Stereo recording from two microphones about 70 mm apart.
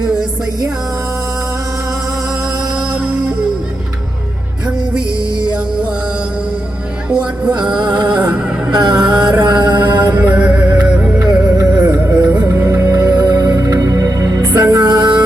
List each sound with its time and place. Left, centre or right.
7.1 s music: centre
7.8 s music: right
8.0 s music: centre
8.7 s a sound: right
9.4 s mantra: right
10.2 s music: right
11.2 s music: right
11.9 s music: right
12.6 s music: right
14.5 s music: right
14.8 s music: right